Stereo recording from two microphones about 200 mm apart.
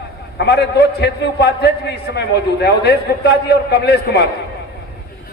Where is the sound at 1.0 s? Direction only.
55° left (ahead or behind).